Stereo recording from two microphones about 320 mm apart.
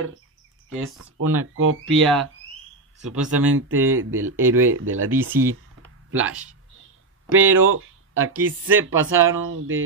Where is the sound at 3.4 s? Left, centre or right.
Right.